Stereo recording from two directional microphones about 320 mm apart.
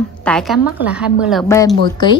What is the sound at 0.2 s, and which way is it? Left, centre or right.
A woman's voice, centre.